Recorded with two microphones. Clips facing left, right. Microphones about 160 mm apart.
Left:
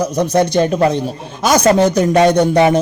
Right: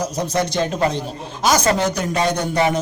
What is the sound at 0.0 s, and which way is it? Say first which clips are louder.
A man's voice: left 7 dB; 60° left (ahead or behind).